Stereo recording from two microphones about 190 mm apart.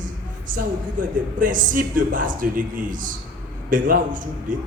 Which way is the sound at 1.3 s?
45° right (ahead or behind).